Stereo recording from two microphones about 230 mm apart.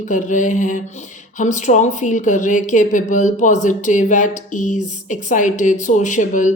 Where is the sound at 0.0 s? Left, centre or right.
Left.